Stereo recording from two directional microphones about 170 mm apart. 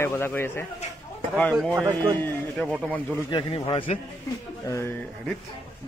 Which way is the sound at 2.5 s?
Centre (ahead or behind).